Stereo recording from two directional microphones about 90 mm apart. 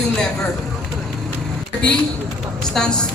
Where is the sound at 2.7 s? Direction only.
10° left (ahead or behind).